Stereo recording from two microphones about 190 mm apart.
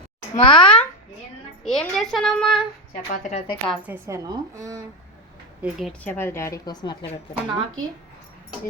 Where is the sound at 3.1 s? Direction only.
40° left (ahead or behind).